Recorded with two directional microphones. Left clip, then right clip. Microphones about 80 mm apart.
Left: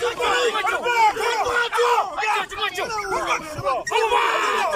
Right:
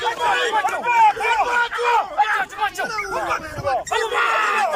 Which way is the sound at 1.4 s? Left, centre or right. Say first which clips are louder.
Even; left.